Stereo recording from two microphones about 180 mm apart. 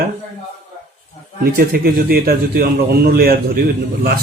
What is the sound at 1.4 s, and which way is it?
Speech, 55° right (ahead or behind).